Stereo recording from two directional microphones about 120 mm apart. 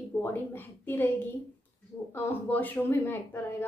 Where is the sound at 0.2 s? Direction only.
15° left (ahead or behind).